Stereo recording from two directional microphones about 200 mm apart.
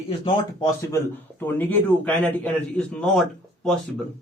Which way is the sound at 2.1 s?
5° left (ahead or behind).